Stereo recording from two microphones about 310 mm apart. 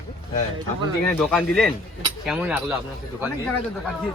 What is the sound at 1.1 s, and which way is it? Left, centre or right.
Speech, centre.